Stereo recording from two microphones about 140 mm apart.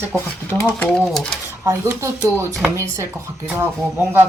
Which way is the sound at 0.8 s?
5° left (ahead or behind).